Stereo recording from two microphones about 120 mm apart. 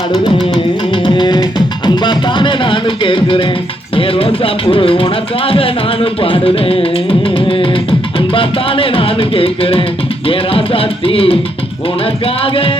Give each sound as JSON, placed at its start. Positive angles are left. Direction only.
{"t": 1.0, "sound": "music", "side_deg": 40}